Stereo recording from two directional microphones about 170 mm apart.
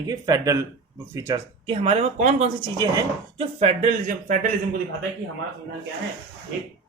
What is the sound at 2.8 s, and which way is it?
Speech, 25° right (ahead or behind).